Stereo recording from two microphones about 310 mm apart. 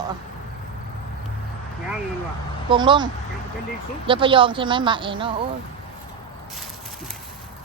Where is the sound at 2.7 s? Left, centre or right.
Centre.